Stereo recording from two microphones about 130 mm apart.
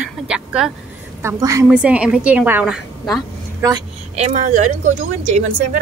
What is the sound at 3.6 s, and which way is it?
Speech, 30° right (ahead or behind).